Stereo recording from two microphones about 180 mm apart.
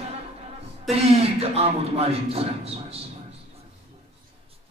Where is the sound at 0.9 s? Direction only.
35° right (ahead or behind).